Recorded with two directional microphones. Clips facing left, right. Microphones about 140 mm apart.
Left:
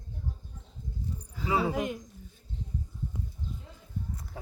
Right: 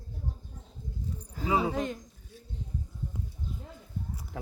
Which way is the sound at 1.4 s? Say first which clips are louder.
Right 1 dB; 20° right (ahead or behind).